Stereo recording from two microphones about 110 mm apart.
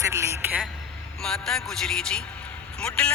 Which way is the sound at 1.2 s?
5° left (ahead or behind).